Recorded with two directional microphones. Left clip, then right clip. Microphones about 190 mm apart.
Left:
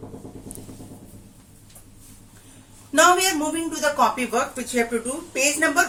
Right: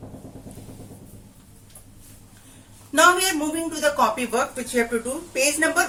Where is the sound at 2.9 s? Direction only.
5° left (ahead or behind).